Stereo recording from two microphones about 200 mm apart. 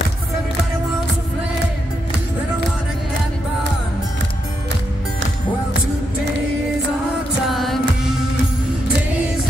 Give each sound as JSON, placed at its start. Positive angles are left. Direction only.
{"t": 7.4, "sound": "music", "side_deg": 0}